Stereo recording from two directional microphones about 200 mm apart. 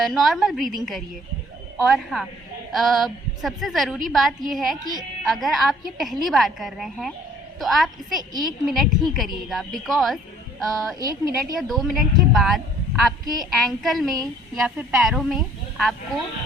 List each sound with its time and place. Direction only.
0.0 s a woman's voice: centre (ahead or behind)
1.8 s a woman's voice: centre (ahead or behind)
11.0 s a woman's voice: 20° right (ahead or behind)
11.7 s a woman's voice: centre (ahead or behind)